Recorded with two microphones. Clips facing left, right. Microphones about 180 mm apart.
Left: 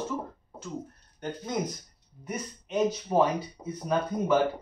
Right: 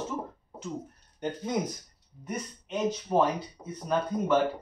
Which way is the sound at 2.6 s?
5° left (ahead or behind).